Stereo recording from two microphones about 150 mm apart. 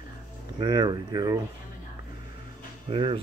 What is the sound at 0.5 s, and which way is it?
Speech, 30° right (ahead or behind).